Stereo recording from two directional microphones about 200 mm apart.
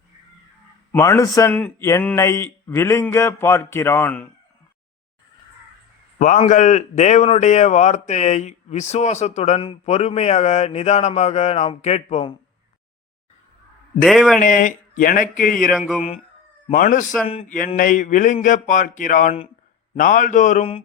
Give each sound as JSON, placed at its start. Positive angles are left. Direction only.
{"t": 0.9, "sound": "a man's voice", "side_deg": 15}
{"t": 6.1, "sound": "a man's voice", "side_deg": 35}
{"t": 14.0, "sound": "a man's voice", "side_deg": 0}
{"t": 14.3, "sound": "speech", "side_deg": 40}
{"t": 16.7, "sound": "a man's voice", "side_deg": 40}